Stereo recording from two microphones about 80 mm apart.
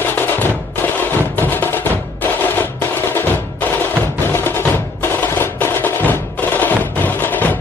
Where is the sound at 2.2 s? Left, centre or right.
Left.